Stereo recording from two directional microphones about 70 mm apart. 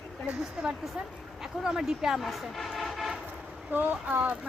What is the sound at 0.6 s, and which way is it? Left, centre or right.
Speech, centre.